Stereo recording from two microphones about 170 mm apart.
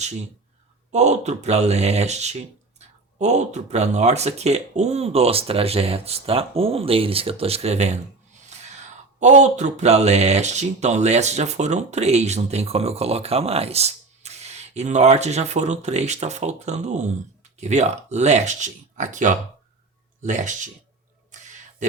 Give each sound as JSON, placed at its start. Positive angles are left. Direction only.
{"t": 0.9, "sound": "speech", "side_deg": -40}
{"t": 8.4, "sound": "gasp", "side_deg": -40}
{"t": 9.2, "sound": "speech", "side_deg": -45}
{"t": 21.3, "sound": "a sound", "side_deg": -45}